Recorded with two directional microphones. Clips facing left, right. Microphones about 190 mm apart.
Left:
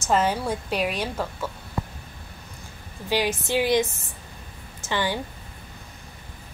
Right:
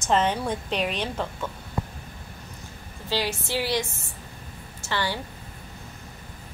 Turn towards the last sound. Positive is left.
turn(degrees=15)  # may be behind; listen again after turning